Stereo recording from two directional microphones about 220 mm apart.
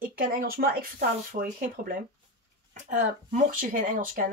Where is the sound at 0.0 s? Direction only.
40° right (ahead or behind).